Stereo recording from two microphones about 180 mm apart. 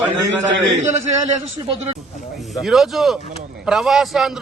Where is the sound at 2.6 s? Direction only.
Centre (ahead or behind).